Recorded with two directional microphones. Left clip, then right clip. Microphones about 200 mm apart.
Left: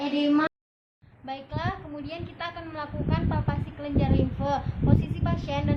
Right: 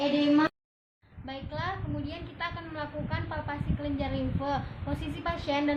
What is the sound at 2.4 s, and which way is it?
A woman's voice, 30° left (ahead or behind).